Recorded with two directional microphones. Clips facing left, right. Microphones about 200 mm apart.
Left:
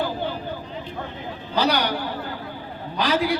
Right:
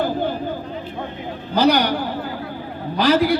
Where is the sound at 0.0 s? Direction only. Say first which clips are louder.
Right 5 dB; 45° right (ahead or behind).